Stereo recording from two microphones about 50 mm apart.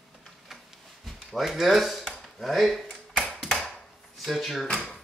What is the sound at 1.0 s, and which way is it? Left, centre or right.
Speech, centre.